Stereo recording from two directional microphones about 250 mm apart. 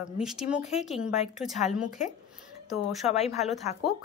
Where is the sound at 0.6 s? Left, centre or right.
Left.